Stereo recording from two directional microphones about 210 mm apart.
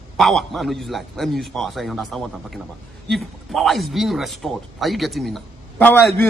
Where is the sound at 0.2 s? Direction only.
Centre (ahead or behind).